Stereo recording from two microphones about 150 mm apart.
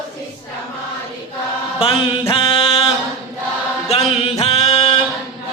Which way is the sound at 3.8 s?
40° left (ahead or behind).